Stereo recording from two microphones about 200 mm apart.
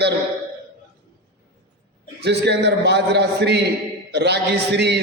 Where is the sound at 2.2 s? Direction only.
55° right (ahead or behind).